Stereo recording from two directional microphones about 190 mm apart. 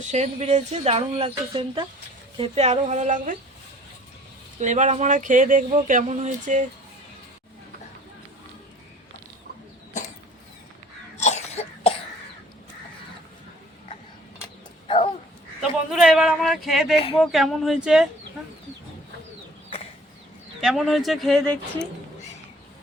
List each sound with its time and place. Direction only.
0.1 s speech: 35° right (ahead or behind)
4.6 s speech: 40° right (ahead or behind)
11.2 s cough: 35° left (ahead or behind)
14.8 s dog: 30° left (ahead or behind)
15.9 s a sound: 5° right (ahead or behind)
17.2 s speech: centre (ahead or behind)
20.6 s speech: centre (ahead or behind)